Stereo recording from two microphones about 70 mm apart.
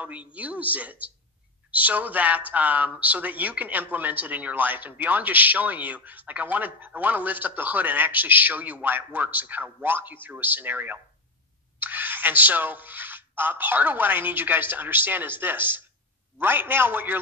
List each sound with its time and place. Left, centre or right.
0.0 s speech: right
11.8 s a sound: right
13.4 s speech: right